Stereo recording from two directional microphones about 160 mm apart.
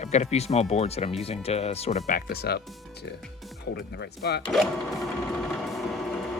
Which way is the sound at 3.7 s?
90° left.